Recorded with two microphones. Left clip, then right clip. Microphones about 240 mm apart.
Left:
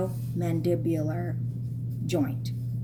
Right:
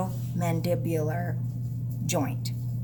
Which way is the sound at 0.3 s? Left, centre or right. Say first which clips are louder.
Even; right.